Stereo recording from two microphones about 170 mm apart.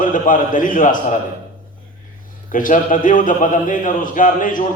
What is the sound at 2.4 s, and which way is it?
A man's voice, 50° left (ahead or behind).